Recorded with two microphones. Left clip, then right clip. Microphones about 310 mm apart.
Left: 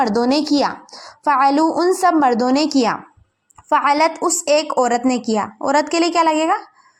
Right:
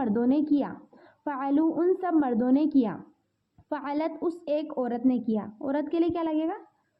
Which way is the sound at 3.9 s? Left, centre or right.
Centre.